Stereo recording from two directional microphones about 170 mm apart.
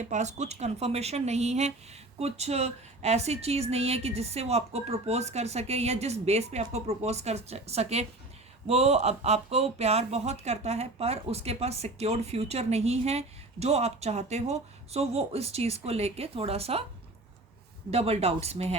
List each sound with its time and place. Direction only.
0.0 s speech: 45° right (ahead or behind)
17.9 s speech: 35° right (ahead or behind)